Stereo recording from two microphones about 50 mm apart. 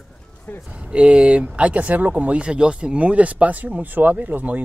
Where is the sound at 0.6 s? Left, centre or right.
Right.